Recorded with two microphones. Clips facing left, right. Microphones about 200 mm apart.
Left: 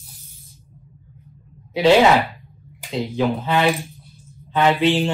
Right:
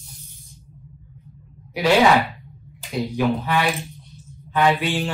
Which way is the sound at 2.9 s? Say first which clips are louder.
Even; 25° left (ahead or behind).